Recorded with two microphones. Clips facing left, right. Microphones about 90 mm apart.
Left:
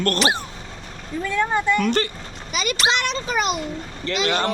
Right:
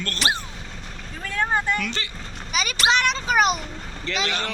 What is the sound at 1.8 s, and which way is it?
Speech, 50° left (ahead or behind).